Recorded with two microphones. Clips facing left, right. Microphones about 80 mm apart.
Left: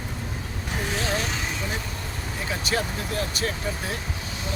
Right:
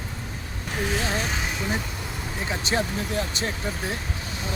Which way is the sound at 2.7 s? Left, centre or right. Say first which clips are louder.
Right 1 dB; right.